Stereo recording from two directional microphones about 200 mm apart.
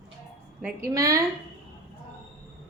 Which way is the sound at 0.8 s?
15° right (ahead or behind).